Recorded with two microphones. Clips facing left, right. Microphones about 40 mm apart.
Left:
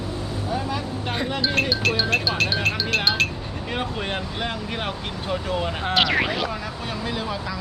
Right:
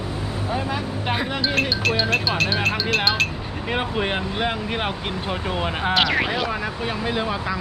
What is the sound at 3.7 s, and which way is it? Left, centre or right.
Speech, centre.